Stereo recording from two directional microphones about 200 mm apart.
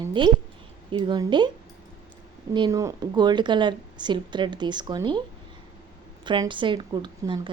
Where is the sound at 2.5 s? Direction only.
20° right (ahead or behind).